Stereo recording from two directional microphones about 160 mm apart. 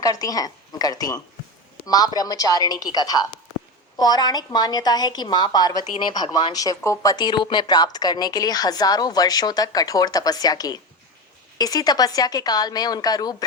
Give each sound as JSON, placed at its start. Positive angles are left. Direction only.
{"t": 0.0, "sound": "speech", "side_deg": 20}